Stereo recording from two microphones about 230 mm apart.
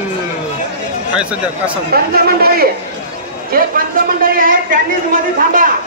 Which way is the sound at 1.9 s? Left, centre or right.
Right.